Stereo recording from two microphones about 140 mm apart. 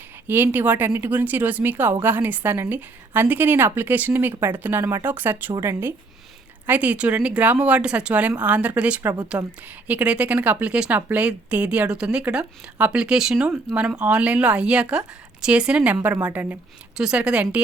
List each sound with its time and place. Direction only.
0.3 s speech: 15° right (ahead or behind)